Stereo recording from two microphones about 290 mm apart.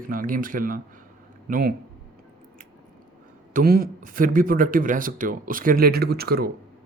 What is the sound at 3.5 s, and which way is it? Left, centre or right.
Speech, right.